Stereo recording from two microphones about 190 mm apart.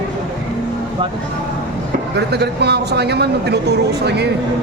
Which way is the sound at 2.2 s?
60° right (ahead or behind).